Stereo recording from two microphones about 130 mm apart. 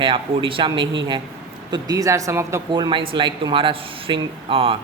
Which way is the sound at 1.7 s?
25° right (ahead or behind).